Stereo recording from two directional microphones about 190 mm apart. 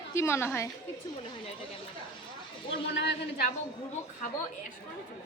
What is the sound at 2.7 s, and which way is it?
Speech, 65° left (ahead or behind).